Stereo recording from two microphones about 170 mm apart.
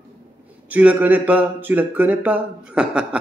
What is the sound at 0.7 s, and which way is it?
Speech, 10° right (ahead or behind).